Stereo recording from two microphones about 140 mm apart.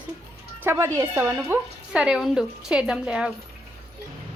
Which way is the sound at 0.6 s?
15° right (ahead or behind).